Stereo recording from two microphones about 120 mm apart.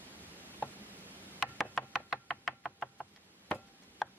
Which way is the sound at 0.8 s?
15° right (ahead or behind).